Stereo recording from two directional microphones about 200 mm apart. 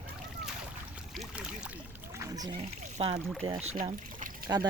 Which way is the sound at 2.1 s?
15° right (ahead or behind).